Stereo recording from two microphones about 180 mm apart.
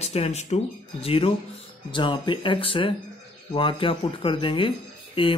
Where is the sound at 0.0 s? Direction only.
35° left (ahead or behind).